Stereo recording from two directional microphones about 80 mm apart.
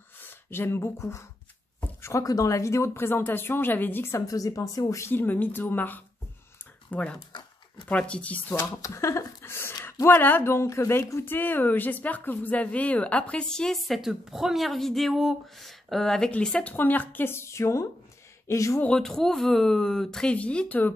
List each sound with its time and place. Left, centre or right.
0.2 s speech: left
2.0 s a sound: left
2.2 s speech: left
4.3 s speech: left
5.1 s a woman's voice: left
8.5 s a woman's voice: left
18.8 s a woman's voice: centre